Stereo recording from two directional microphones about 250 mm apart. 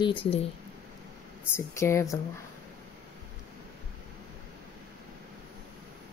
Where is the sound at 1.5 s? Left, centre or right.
Centre.